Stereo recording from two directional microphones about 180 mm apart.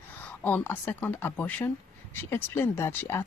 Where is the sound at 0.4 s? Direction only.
10° left (ahead or behind).